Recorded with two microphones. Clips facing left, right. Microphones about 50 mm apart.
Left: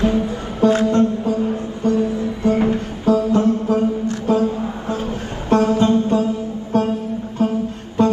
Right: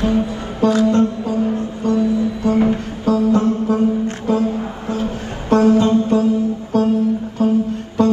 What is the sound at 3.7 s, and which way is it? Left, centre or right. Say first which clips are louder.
Music: right 1 dB; right.